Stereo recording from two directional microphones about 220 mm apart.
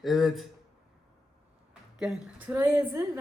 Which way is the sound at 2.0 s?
5° right (ahead or behind).